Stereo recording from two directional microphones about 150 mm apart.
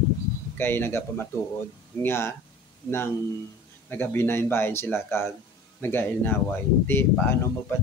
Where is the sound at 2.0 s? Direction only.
15° left (ahead or behind).